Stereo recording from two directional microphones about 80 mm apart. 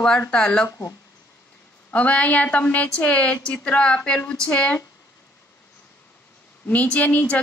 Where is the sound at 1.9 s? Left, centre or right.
Centre.